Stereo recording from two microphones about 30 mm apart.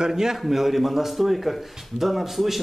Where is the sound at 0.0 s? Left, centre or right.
Centre.